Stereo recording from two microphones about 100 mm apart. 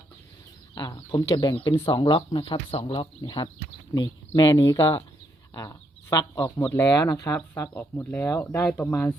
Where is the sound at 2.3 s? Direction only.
70° left (ahead or behind).